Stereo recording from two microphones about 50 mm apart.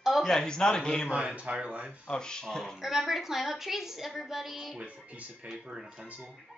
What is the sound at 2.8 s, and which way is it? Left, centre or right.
A woman's voice, centre.